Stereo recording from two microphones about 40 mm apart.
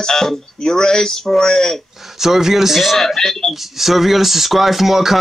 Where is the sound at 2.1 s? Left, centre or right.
Centre.